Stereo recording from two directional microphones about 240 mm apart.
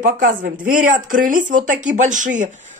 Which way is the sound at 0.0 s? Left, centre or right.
Right.